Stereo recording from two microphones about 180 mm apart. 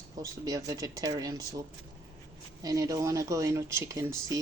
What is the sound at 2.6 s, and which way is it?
Speech, 20° right (ahead or behind).